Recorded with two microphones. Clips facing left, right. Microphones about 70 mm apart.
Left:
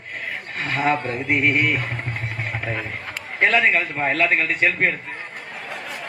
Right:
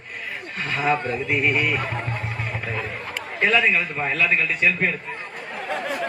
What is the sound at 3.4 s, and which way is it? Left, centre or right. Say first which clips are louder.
Speech: left 2 dB; left.